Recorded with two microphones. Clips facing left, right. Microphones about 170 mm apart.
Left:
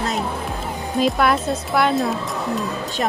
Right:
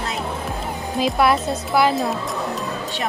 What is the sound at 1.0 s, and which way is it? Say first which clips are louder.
Speech: even; centre (ahead or behind).